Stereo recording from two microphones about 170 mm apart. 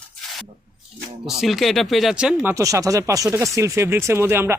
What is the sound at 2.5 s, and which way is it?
Speech, 20° right (ahead or behind).